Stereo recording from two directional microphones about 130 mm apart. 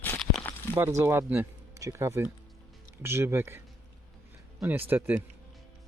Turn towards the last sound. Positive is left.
turn(degrees=-15)  # may be behind; listen again after turning